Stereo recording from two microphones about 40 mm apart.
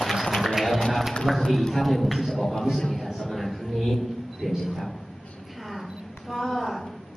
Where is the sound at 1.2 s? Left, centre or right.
Centre.